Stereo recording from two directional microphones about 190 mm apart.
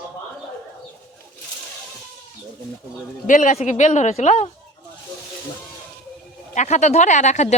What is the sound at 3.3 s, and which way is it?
Speech, 40° left (ahead or behind).